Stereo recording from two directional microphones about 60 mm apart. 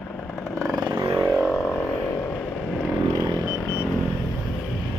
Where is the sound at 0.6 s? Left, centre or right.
Right.